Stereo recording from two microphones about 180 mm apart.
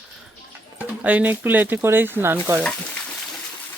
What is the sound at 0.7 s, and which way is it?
Speech, 10° right (ahead or behind).